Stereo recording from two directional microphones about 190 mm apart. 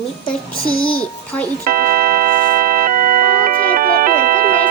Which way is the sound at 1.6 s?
50° right (ahead or behind).